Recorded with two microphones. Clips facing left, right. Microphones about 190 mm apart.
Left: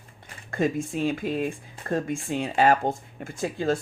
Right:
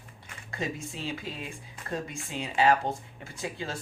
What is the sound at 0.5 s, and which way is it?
Speech, 50° left (ahead or behind).